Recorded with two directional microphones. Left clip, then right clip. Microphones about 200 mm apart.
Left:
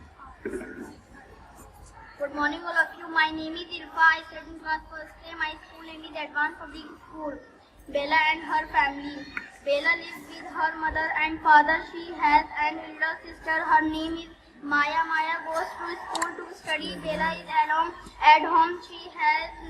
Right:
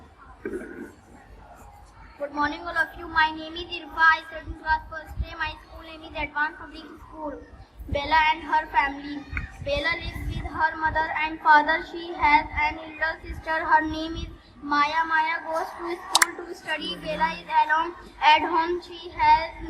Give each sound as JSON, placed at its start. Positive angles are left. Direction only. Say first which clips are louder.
{"t": 2.2, "sound": "a woman's voice", "louder": "right 1 dB", "side_deg": -35}
{"t": 7.9, "sound": "a woman's voice", "louder": "right 2 dB", "side_deg": -35}